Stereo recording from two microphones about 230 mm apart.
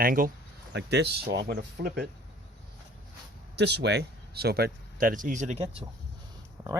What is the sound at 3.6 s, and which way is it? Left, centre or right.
Speech, right.